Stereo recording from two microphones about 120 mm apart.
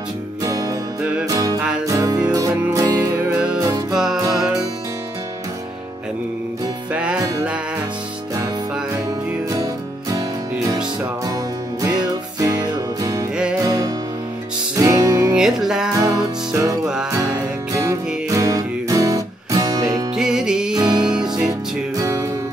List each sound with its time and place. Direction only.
0.4 s music: 30° right (ahead or behind)
3.9 s music: 5° right (ahead or behind)
6.9 s music: 10° right (ahead or behind)
10.1 s music: 30° right (ahead or behind)
15.3 s music: 5° right (ahead or behind)
16.0 s music: 30° right (ahead or behind)
17.7 s music: 25° right (ahead or behind)
20.2 s music: 5° right (ahead or behind)
20.7 s music: 35° right (ahead or behind)